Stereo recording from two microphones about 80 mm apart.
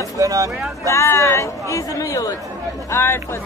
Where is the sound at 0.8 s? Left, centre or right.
Left.